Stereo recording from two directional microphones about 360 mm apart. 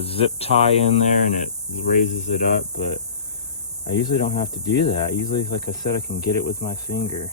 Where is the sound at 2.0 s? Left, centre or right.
Left.